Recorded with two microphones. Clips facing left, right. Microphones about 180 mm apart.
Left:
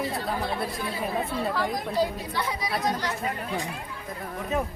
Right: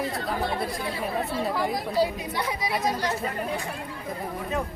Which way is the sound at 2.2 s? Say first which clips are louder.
Right 1 dB; 20° right (ahead or behind).